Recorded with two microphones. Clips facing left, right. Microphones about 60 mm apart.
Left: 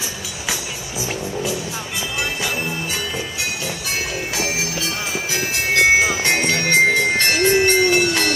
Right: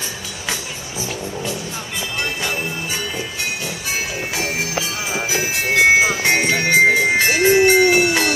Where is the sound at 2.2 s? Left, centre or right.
Centre.